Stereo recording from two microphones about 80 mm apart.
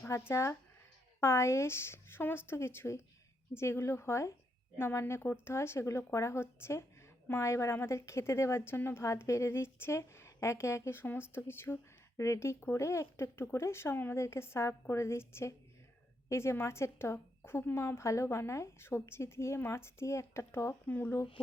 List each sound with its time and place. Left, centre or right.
0.1 s a woman's voice: left
12.1 s a woman's voice: left